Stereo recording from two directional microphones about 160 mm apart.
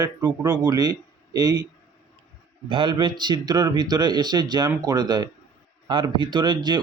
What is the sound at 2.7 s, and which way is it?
Speech, 30° right (ahead or behind).